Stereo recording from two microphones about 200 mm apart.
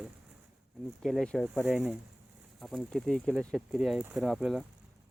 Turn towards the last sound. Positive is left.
turn(degrees=0)  # may be behind; listen again after turning